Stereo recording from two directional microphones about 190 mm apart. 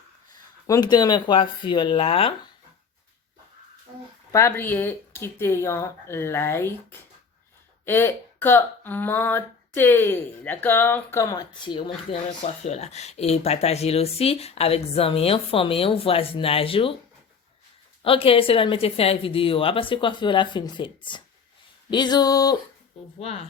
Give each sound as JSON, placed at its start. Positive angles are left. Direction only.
{"t": 0.7, "sound": "speech", "side_deg": 20}
{"t": 4.3, "sound": "speech", "side_deg": 15}
{"t": 7.9, "sound": "speech", "side_deg": 10}
{"t": 18.0, "sound": "speech", "side_deg": 30}